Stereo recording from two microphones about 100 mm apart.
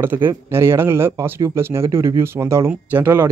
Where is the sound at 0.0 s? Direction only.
20° right (ahead or behind).